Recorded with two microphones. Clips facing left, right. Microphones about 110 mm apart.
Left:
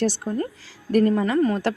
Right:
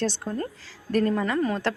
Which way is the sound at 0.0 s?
10° left (ahead or behind).